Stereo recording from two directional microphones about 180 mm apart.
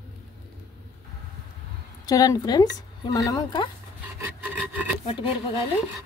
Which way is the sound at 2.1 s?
20° left (ahead or behind).